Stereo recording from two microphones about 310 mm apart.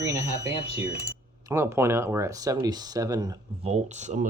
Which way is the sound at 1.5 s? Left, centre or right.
Centre.